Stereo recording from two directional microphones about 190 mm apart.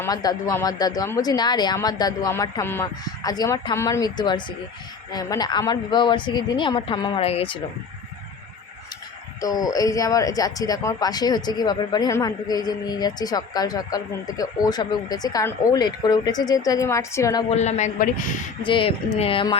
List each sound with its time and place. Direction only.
0.0 s a man's voice: 20° left (ahead or behind)
9.4 s speech: 20° left (ahead or behind)
17.5 s a man's voice: 35° left (ahead or behind)
18.6 s speech: 25° left (ahead or behind)